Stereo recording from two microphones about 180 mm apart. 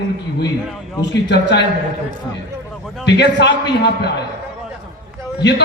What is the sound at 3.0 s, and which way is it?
Speech, 75° left (ahead or behind).